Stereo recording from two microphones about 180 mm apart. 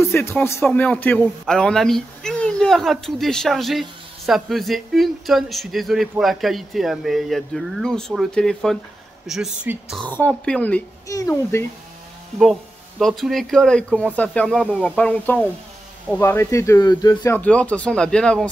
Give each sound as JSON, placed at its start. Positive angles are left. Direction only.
{"t": 0.0, "sound": "speech", "side_deg": 15}
{"t": 10.0, "sound": "speech", "side_deg": 10}
{"t": 11.1, "sound": "speech", "side_deg": 15}
{"t": 13.0, "sound": "speech", "side_deg": 0}